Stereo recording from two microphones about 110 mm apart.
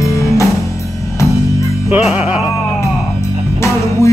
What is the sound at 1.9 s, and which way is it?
Music, 5° right (ahead or behind).